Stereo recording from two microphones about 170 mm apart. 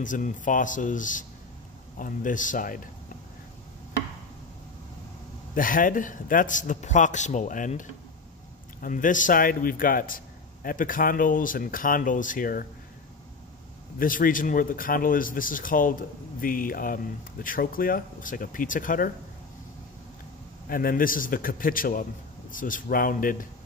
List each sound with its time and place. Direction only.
0.0 s a man's voice: 50° left (ahead or behind)
5.5 s a man's voice: 55° left (ahead or behind)
8.8 s speech: 50° left (ahead or behind)
13.9 s speech: 55° left (ahead or behind)
20.6 s a man's voice: 60° left (ahead or behind)